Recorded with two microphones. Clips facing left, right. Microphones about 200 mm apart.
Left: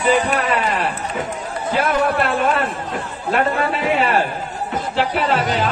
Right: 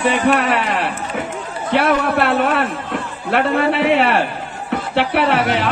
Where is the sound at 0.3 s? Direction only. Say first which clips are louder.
Right 3 dB; 70° right (ahead or behind).